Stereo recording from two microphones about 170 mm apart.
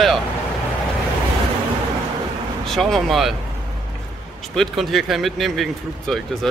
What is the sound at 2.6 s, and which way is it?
Speech, centre (ahead or behind).